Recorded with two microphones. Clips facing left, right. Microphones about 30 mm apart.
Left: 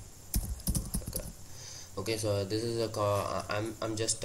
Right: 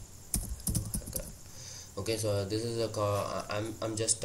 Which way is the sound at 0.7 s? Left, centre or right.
Left.